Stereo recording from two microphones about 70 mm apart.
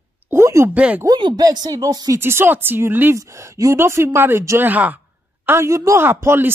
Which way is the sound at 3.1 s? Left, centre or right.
Right.